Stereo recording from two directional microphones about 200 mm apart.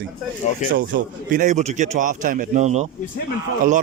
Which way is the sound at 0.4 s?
35° left (ahead or behind).